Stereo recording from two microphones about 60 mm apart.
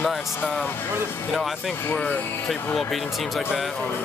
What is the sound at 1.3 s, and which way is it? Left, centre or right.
Speech, centre.